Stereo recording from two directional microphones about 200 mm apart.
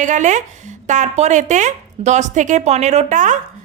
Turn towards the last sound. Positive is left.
turn(degrees=-40)  # may be behind; listen again after turning